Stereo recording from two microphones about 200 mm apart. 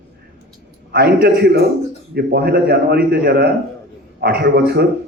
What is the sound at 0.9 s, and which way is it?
A man's voice, 50° right (ahead or behind).